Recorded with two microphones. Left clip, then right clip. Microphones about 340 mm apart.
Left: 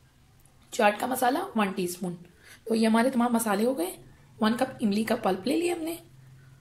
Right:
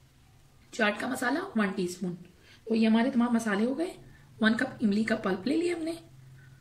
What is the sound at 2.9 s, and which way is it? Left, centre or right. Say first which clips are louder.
Speech: left 4 dB; left.